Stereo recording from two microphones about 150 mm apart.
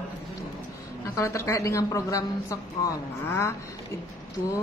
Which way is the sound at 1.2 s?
20° left (ahead or behind).